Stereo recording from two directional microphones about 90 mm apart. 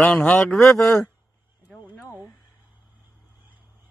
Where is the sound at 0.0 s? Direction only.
10° left (ahead or behind).